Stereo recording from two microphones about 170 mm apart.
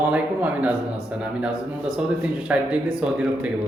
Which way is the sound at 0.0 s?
10° right (ahead or behind).